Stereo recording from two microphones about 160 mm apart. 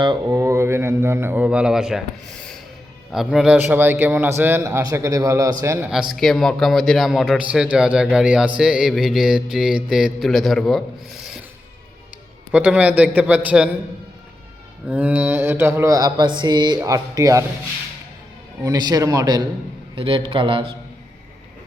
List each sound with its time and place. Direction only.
0.0 s a man's voice: 25° right (ahead or behind)
5.9 s speech: centre (ahead or behind)
12.5 s a man's voice: 10° right (ahead or behind)
14.8 s mantra: 10° right (ahead or behind)
18.6 s mantra: 25° right (ahead or behind)
20.0 s a man's voice: 35° right (ahead or behind)